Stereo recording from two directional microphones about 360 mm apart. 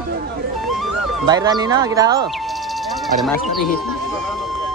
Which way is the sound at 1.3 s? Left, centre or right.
Centre.